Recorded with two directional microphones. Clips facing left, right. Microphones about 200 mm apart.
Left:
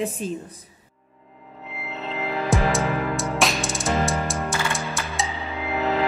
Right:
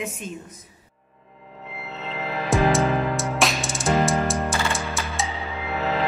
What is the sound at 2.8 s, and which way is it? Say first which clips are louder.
Music: right 2 dB; 15° right (ahead or behind).